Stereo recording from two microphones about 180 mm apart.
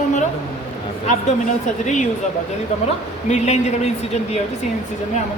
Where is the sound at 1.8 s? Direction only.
40° left (ahead or behind).